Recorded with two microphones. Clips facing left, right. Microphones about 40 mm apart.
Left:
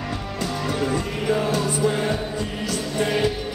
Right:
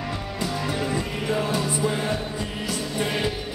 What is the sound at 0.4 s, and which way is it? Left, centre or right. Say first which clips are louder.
Music: left 2 dB; centre.